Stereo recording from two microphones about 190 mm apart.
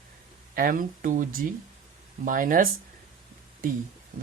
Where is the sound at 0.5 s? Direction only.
45° right (ahead or behind).